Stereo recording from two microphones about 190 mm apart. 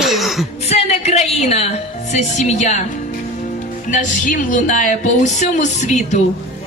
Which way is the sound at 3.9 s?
45° left (ahead or behind).